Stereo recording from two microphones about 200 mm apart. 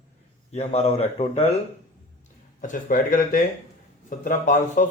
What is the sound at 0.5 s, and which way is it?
Speech, 30° left (ahead or behind).